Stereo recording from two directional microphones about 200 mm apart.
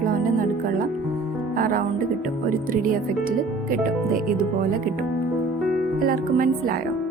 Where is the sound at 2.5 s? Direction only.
45° right (ahead or behind).